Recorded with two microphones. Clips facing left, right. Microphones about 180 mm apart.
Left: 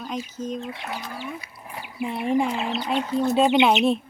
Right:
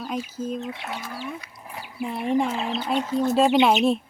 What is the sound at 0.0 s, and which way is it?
Speech, 5° right (ahead or behind).